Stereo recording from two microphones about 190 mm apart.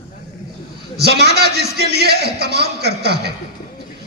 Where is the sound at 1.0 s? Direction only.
60° right (ahead or behind).